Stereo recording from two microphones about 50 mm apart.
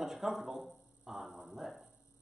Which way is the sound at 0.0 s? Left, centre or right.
Centre.